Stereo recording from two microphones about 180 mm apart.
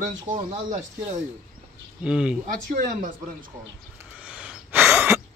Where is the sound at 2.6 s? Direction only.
50° right (ahead or behind).